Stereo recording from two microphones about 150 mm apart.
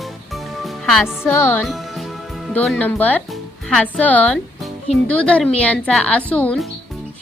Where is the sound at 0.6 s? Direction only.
Centre (ahead or behind).